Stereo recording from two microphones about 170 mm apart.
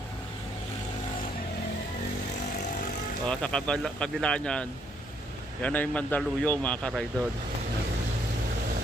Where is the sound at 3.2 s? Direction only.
5° left (ahead or behind).